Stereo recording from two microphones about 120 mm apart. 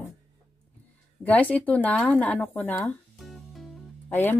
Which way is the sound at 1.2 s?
15° left (ahead or behind).